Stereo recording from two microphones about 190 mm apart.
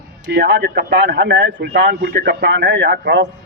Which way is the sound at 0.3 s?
65° right (ahead or behind).